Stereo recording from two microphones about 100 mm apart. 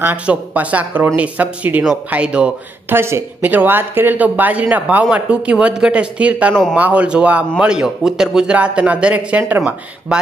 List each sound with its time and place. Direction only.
0.0 s speech: 15° right (ahead or behind)
2.9 s speech: 25° right (ahead or behind)